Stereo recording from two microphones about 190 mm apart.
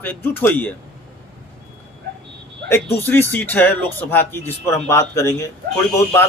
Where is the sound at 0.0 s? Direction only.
10° left (ahead or behind).